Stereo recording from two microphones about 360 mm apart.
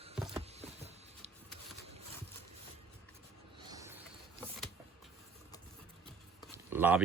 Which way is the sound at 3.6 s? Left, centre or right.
Centre.